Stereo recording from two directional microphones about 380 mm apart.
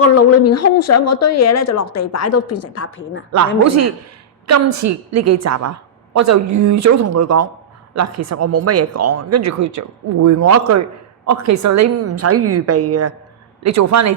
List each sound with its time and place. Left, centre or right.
0.0 s speech: left
3.6 s a woman's voice: right